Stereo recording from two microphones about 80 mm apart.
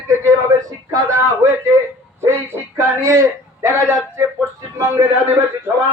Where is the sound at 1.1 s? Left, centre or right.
Right.